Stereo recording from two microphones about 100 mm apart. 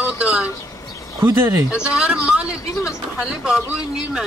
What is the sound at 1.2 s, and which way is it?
Speech, 30° right (ahead or behind).